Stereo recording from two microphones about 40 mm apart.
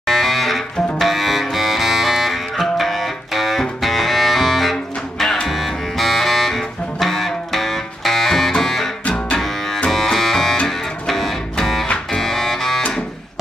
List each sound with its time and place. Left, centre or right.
0.0 s music: centre
9.0 s double bass: left
9.4 s music: centre